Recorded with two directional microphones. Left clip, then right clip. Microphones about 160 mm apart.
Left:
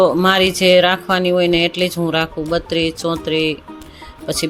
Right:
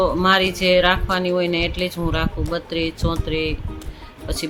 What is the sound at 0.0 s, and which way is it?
Speech, 40° left (ahead or behind).